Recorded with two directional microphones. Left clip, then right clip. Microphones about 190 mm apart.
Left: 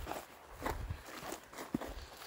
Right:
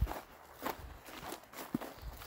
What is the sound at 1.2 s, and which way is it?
Walk, 30° left (ahead or behind).